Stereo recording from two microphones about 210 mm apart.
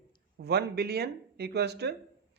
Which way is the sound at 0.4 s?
50° right (ahead or behind).